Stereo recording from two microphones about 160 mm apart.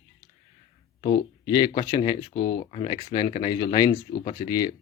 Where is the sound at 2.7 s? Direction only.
35° left (ahead or behind).